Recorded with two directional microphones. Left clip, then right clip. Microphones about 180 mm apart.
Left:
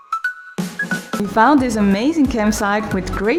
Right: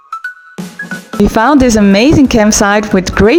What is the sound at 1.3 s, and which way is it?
Speech, 45° right (ahead or behind).